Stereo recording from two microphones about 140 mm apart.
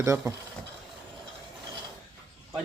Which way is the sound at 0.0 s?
20° right (ahead or behind).